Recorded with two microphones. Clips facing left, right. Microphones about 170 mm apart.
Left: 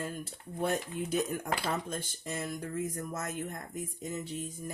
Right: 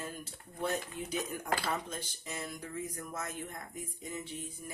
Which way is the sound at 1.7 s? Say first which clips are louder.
Left 3 dB; 50° left (ahead or behind).